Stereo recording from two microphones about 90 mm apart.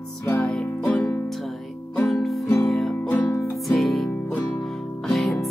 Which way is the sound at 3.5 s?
Centre (ahead or behind).